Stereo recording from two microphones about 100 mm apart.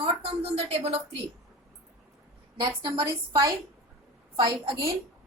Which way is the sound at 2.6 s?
55° right (ahead or behind).